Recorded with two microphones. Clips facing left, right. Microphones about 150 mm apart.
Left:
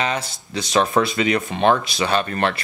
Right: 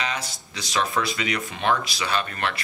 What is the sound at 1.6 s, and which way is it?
Speech, 50° left (ahead or behind).